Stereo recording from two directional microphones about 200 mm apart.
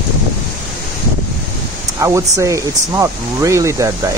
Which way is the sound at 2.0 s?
15° right (ahead or behind).